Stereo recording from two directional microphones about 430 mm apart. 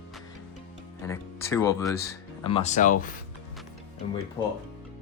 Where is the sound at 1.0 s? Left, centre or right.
Centre.